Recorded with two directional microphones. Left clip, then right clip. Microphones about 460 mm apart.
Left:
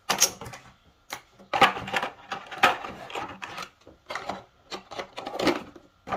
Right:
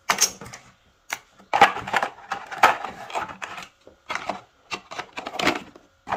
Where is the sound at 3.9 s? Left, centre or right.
Centre.